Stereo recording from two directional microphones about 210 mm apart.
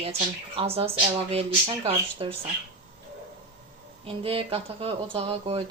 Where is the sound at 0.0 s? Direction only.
30° right (ahead or behind).